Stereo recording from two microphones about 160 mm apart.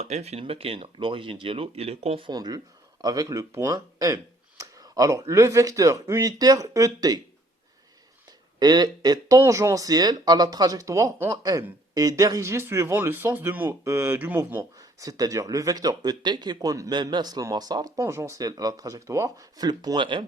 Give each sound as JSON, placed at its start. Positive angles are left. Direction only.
{"t": 0.0, "sound": "speech", "side_deg": -45}
{"t": 8.5, "sound": "speech", "side_deg": -25}